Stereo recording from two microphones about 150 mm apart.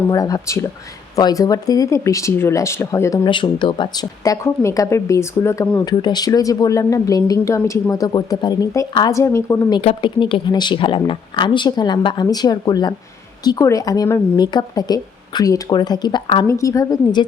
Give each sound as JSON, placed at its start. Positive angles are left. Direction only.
{"t": 0.1, "sound": "speech", "side_deg": 25}
{"t": 3.2, "sound": "speech", "side_deg": 30}
{"t": 9.8, "sound": "speech", "side_deg": 35}
{"t": 16.5, "sound": "speech", "side_deg": 20}